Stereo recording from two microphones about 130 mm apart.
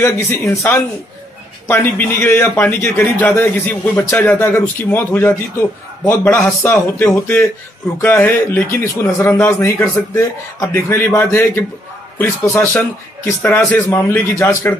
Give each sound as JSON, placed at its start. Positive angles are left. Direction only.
{"t": 0.0, "sound": "a man's voice", "side_deg": 20}